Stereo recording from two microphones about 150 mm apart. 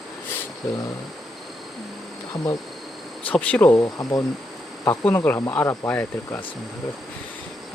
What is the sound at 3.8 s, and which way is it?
Speech, 25° left (ahead or behind).